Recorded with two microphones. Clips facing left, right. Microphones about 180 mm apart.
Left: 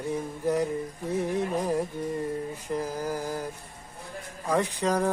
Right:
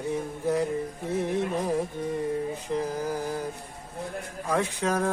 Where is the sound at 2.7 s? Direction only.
10° left (ahead or behind).